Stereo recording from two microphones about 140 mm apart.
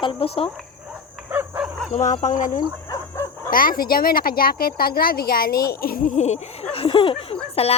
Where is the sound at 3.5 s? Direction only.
90° left; by 6.7 s 55° left (ahead or behind).